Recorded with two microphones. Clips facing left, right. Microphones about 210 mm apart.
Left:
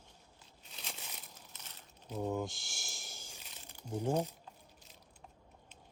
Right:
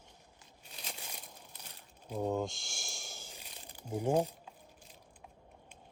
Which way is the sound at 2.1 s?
15° right (ahead or behind).